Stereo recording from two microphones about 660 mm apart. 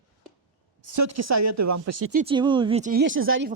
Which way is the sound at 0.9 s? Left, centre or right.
Right.